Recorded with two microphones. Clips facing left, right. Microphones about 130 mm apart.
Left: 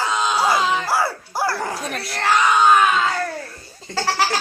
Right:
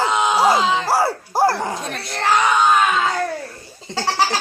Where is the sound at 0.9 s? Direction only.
35° right (ahead or behind).